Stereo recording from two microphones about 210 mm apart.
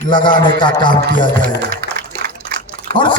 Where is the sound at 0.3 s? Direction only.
20° left (ahead or behind).